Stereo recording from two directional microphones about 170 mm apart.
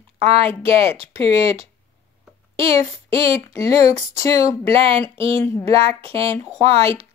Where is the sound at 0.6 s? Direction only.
35° right (ahead or behind).